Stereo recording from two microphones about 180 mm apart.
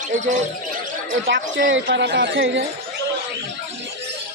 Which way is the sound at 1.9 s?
75° right (ahead or behind).